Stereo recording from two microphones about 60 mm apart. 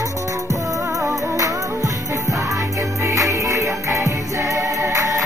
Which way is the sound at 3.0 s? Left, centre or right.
Right.